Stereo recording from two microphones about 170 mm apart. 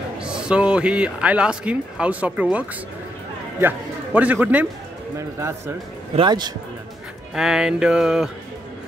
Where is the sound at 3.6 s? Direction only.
10° right (ahead or behind).